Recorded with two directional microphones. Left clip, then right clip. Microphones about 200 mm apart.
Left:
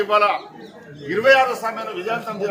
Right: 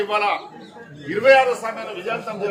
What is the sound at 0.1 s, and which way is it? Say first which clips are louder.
A man's voice: left 3 dB; 10° right (ahead or behind).